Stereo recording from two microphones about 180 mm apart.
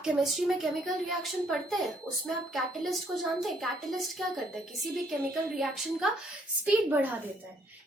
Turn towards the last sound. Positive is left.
turn(degrees=-10)  # may be behind; listen again after turning